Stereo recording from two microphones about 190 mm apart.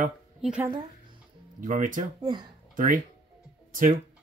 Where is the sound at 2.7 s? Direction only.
45° right (ahead or behind).